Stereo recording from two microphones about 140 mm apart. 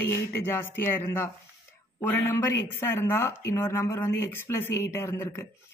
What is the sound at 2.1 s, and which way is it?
Speech, 15° left (ahead or behind).